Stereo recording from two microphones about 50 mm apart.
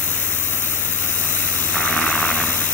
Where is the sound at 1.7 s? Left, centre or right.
Left.